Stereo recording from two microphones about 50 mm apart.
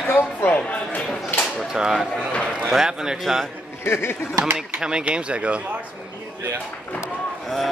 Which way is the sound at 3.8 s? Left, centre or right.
Left.